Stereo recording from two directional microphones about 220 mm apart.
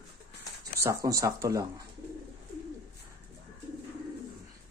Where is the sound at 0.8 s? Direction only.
15° right (ahead or behind).